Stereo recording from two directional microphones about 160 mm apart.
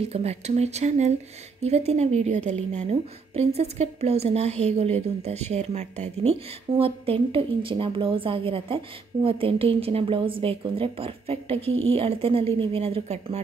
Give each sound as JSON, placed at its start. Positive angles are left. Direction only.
{"t": 0.0, "sound": "a woman's voice", "side_deg": -40}